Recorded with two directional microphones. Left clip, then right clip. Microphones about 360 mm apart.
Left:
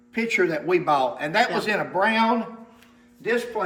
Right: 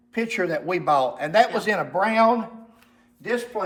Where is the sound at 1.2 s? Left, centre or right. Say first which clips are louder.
Right 3 dB; right.